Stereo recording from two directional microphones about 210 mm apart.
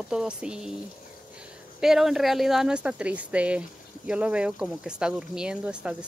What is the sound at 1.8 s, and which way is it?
Speech, centre (ahead or behind).